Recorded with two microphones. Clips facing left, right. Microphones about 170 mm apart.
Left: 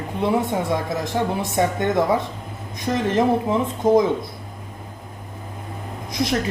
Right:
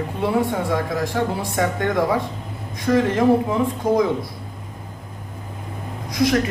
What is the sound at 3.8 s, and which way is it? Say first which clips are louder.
Speech: left 5 dB; 25° left (ahead or behind).